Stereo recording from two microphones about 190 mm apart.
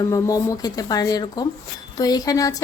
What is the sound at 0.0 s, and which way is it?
A woman's voice, 20° left (ahead or behind).